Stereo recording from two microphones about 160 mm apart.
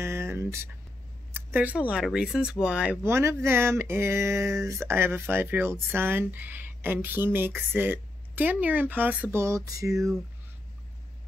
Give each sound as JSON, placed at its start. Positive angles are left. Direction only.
{"t": 0.0, "sound": "speech", "side_deg": -15}